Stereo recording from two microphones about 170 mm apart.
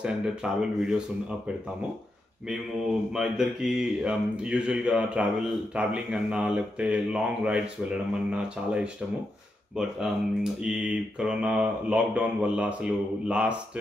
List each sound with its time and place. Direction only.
0.0 s speech: 5° right (ahead or behind)
2.5 s speech: centre (ahead or behind)